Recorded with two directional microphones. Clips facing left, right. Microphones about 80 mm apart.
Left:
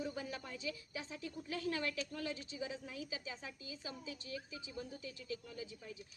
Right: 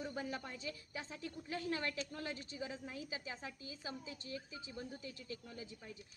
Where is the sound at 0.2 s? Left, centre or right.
Right.